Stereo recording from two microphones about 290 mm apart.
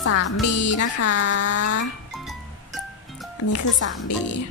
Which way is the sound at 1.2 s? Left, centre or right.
Left.